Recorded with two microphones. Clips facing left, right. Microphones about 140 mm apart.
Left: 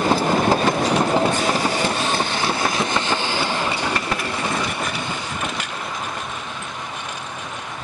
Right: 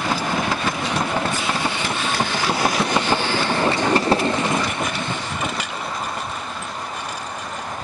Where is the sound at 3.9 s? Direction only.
30° right (ahead or behind).